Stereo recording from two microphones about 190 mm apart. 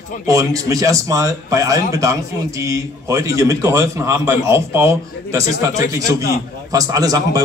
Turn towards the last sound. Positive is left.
turn(degrees=-20)  # may be behind; listen again after turning